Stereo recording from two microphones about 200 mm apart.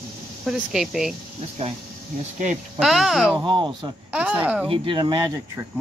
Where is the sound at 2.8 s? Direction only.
Centre (ahead or behind).